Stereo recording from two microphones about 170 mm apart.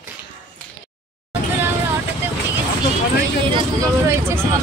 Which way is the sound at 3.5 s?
20° right (ahead or behind).